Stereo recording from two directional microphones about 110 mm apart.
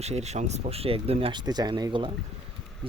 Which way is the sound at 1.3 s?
40° right (ahead or behind).